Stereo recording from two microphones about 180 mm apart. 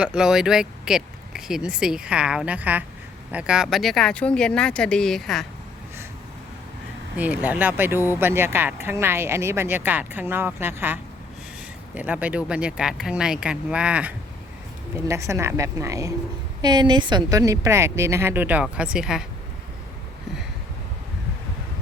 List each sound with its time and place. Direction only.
0.0 s speech: 5° right (ahead or behind)
7.2 s speech: 10° right (ahead or behind)